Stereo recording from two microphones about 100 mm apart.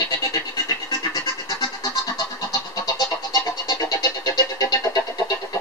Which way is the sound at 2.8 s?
40° left (ahead or behind).